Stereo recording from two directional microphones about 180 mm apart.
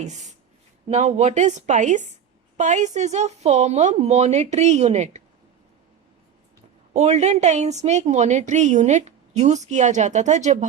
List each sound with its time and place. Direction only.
0.0 s a woman's voice: 40° right (ahead or behind)
6.9 s a woman's voice: 40° right (ahead or behind)